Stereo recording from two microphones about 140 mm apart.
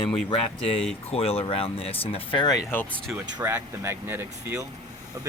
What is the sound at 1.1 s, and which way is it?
Speech, 45° left (ahead or behind).